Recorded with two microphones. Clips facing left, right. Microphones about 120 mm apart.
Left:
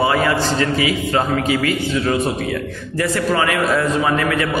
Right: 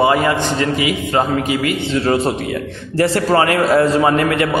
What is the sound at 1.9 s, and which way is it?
A man's voice, 30° right (ahead or behind).